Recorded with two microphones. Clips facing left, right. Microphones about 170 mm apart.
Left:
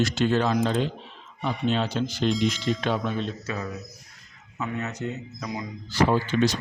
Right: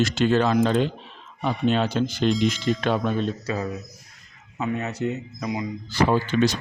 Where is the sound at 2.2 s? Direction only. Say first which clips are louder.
Right 2 dB; centre (ahead or behind).